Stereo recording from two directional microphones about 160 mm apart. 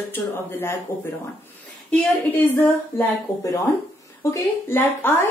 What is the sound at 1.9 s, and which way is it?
A woman's voice, 10° left (ahead or behind).